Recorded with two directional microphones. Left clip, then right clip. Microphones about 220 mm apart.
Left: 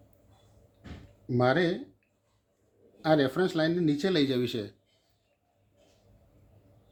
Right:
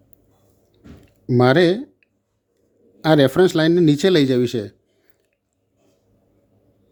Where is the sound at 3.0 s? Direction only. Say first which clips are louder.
Right 11 dB; 45° right (ahead or behind).